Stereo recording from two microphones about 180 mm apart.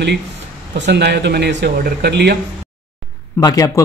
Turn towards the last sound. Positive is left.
turn(degrees=20)  # may be behind; listen again after turning